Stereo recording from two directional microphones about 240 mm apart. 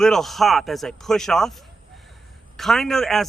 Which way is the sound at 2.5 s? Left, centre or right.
Centre.